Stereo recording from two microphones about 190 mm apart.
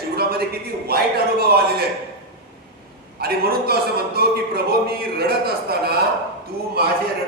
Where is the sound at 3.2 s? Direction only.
55° right (ahead or behind).